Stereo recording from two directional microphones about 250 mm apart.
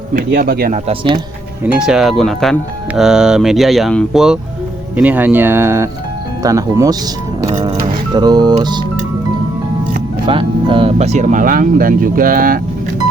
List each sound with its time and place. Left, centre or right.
0.1 s speech: right
0.9 s speech: centre
1.6 s speech: centre
7.5 s speech: right
10.2 s speech: centre